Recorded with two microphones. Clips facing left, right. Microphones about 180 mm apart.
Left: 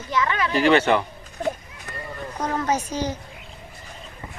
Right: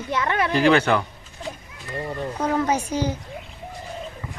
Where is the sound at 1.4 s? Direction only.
55° left (ahead or behind).